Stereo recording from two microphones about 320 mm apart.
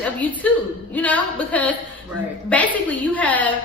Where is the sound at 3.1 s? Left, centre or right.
Centre.